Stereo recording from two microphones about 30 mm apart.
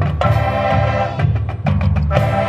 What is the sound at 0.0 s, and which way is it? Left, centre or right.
Music, centre.